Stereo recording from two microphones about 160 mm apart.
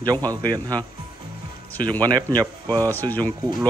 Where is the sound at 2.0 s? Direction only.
25° right (ahead or behind).